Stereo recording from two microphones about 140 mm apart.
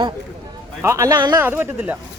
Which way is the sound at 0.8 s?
20° right (ahead or behind).